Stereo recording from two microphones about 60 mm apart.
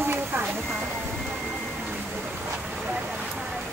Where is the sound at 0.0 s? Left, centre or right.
Right.